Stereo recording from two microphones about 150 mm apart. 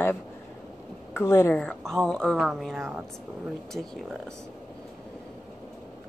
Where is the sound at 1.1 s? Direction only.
15° left (ahead or behind); by 2.8 s centre (ahead or behind).